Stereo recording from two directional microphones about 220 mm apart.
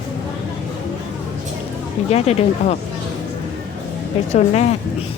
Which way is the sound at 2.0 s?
30° left (ahead or behind).